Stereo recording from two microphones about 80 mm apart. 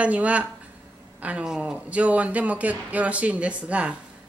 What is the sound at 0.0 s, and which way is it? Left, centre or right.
A man's voice, centre.